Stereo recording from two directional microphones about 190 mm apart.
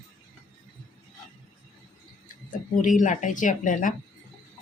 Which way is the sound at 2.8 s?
45° left (ahead or behind).